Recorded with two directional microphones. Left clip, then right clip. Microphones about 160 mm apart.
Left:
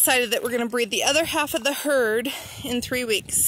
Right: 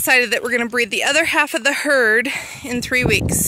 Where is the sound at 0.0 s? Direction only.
20° right (ahead or behind).